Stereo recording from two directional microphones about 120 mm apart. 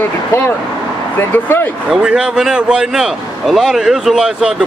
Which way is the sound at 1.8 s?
5° right (ahead or behind).